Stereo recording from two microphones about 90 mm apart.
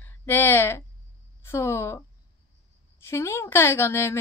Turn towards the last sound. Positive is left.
turn(degrees=30)  # may be behind; listen again after turning